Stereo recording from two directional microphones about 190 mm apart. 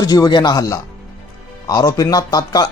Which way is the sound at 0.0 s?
20° left (ahead or behind).